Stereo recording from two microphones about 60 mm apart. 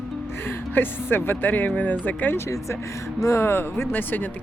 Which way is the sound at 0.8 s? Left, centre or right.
Left.